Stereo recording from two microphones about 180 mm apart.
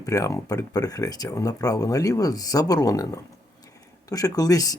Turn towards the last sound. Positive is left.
turn(degrees=20)  # may be behind; listen again after turning